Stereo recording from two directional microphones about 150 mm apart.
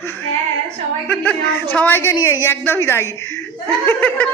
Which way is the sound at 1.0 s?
10° left (ahead or behind).